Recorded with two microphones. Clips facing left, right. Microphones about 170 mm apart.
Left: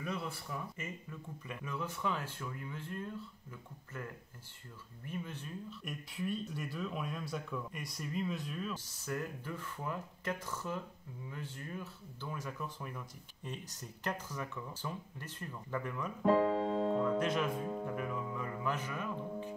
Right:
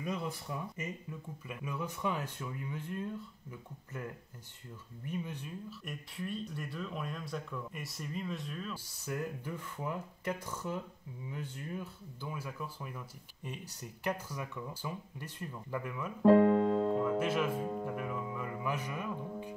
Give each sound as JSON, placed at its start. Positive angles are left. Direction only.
{"t": 0.0, "sound": "a sound", "side_deg": -15}
{"t": 1.5, "sound": "speech", "side_deg": -10}
{"t": 5.1, "sound": "speech", "side_deg": -15}
{"t": 5.9, "sound": "speech", "side_deg": 0}
{"t": 8.7, "sound": "speech", "side_deg": -10}
{"t": 16.3, "sound": "keyboard", "side_deg": -55}
{"t": 17.0, "sound": "speech", "side_deg": -5}